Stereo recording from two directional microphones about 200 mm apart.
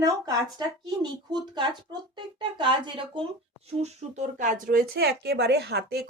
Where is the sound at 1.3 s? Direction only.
20° right (ahead or behind).